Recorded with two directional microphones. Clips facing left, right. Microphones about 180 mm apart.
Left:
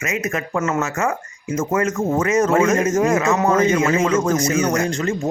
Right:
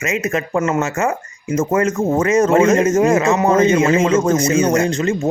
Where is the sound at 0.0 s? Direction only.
25° right (ahead or behind).